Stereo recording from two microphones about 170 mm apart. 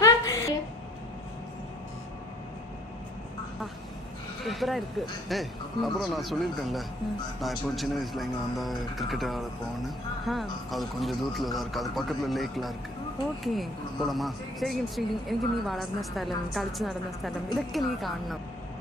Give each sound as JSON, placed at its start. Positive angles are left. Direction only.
{"t": 0.0, "sound": "a sound", "side_deg": 20}
{"t": 4.5, "sound": "speech", "side_deg": 0}
{"t": 14.0, "sound": "speech", "side_deg": 0}